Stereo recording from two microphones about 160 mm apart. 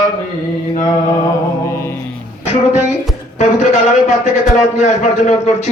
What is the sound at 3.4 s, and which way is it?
A man's voice, 45° left (ahead or behind).